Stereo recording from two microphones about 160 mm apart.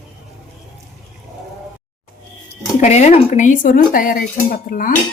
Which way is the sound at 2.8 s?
45° left (ahead or behind).